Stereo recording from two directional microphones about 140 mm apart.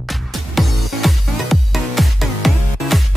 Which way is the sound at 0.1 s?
Centre (ahead or behind).